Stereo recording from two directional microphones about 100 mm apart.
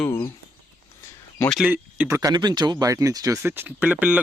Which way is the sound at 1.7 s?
25° right (ahead or behind).